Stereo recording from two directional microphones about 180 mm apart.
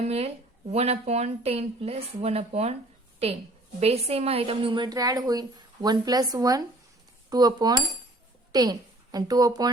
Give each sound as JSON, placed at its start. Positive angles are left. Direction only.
{"t": 0.0, "sound": "speech", "side_deg": -35}
{"t": 3.8, "sound": "a woman's voice", "side_deg": -35}